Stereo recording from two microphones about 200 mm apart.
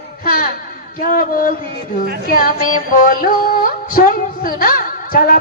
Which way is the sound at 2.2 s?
45° left (ahead or behind).